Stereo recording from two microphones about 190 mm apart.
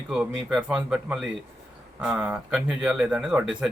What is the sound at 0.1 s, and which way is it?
Speech, 5° right (ahead or behind).